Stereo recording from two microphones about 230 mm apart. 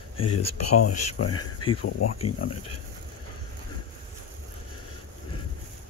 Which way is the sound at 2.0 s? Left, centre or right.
Left.